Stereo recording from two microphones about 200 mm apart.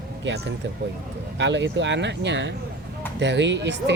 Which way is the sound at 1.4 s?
60° right (ahead or behind).